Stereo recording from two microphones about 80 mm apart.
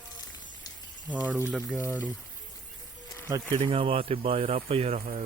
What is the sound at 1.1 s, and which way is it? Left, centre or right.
Speech, centre.